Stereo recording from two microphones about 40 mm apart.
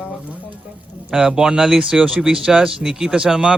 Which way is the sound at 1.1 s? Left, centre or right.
Centre.